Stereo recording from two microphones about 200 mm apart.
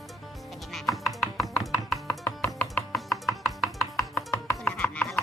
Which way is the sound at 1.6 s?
Centre (ahead or behind).